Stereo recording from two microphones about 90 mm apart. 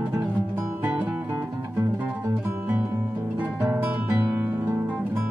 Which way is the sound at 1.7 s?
25° right (ahead or behind).